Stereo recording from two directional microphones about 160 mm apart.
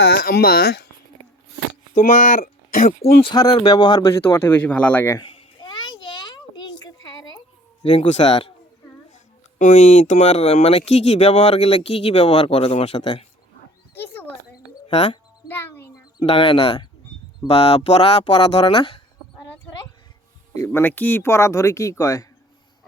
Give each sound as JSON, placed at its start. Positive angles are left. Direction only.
{"t": 0.0, "sound": "speech", "side_deg": 75}
{"t": 2.0, "sound": "speech", "side_deg": 55}
{"t": 3.2, "sound": "speech", "side_deg": 30}
{"t": 5.5, "sound": "a sound", "side_deg": 30}
{"t": 7.9, "sound": "speech", "side_deg": 45}
{"t": 9.6, "sound": "speech", "side_deg": 50}
{"t": 14.0, "sound": "a sound", "side_deg": 15}
{"t": 14.8, "sound": "speech", "side_deg": 30}
{"t": 15.4, "sound": "music", "side_deg": 15}
{"t": 16.2, "sound": "speech", "side_deg": 35}
{"t": 20.5, "sound": "speech", "side_deg": 15}